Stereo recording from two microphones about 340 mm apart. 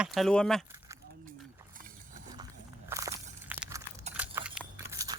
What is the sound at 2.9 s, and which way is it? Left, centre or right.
Walk, centre.